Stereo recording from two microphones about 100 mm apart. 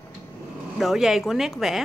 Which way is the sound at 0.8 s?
5° right (ahead or behind).